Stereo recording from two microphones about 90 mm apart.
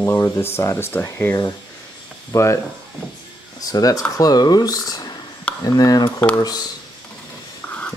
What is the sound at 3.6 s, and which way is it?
Speech, 45° left (ahead or behind).